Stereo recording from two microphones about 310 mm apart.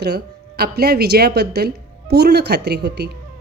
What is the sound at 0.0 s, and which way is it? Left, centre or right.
Speech, right.